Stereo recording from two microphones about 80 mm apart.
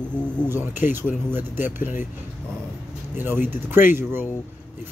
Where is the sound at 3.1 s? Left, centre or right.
Right.